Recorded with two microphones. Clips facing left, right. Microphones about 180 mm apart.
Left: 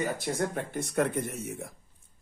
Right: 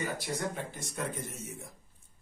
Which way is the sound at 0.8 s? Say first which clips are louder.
Left 10 dB; 60° left (ahead or behind).